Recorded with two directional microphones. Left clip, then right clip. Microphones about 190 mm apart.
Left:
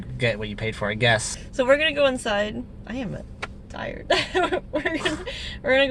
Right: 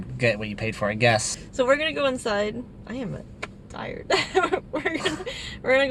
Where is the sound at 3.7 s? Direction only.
10° left (ahead or behind).